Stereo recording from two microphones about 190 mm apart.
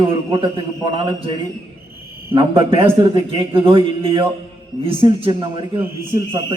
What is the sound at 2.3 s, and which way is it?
A man's voice, 30° right (ahead or behind).